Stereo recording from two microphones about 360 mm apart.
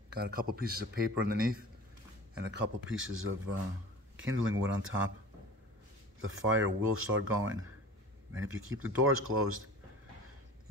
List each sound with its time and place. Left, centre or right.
0.1 s speech: right
6.1 s speech: right